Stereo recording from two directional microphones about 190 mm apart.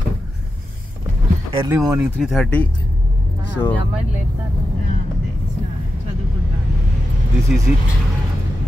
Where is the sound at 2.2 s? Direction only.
Centre (ahead or behind).